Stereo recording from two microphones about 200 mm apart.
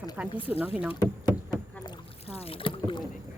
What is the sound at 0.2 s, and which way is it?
Speech, 5° right (ahead or behind).